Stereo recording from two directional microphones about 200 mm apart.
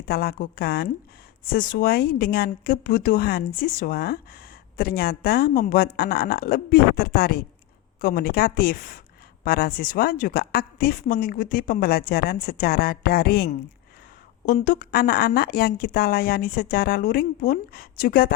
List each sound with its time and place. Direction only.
0.1 s a woman's voice: 50° left (ahead or behind)